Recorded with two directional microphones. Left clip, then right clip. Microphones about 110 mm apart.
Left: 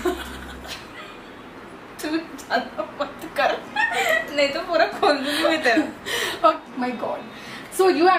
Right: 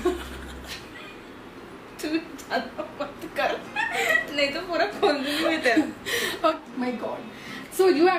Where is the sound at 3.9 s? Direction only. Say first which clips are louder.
Even; 5° left (ahead or behind).